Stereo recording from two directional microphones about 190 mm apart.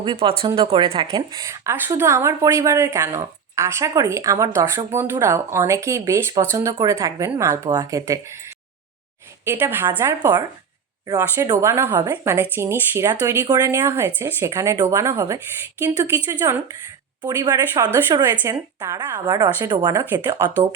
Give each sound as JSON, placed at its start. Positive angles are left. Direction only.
{"t": 0.0, "sound": "speech", "side_deg": -25}
{"t": 9.4, "sound": "speech", "side_deg": -10}
{"t": 17.2, "sound": "speech", "side_deg": -20}